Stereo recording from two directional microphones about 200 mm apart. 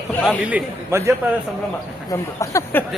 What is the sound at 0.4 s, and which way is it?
Speech, 10° right (ahead or behind).